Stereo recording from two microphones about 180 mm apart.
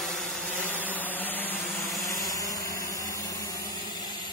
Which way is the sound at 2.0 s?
20° left (ahead or behind).